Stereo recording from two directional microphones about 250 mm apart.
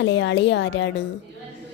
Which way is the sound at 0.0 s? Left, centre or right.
Left.